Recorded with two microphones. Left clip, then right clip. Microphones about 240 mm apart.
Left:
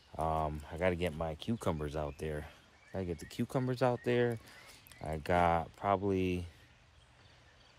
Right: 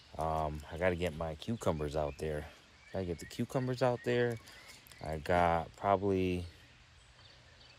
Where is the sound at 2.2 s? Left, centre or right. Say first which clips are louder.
Right 2 dB; centre.